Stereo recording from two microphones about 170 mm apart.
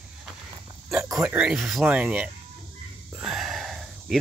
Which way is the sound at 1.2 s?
10° right (ahead or behind).